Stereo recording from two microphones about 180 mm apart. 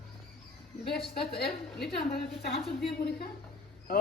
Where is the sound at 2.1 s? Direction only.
60° left (ahead or behind).